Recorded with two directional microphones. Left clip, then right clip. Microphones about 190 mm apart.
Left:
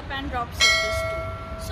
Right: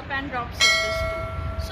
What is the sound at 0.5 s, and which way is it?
Church bell, centre (ahead or behind).